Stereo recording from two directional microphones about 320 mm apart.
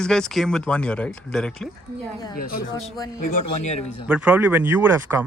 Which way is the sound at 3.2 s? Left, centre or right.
Left.